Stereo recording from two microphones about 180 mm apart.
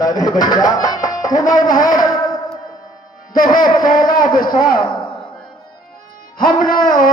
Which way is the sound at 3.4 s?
20° left (ahead or behind).